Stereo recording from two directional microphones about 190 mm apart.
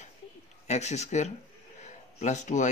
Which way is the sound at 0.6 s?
35° left (ahead or behind).